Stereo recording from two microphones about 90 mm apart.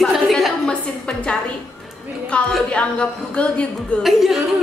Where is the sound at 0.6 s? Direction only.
10° left (ahead or behind).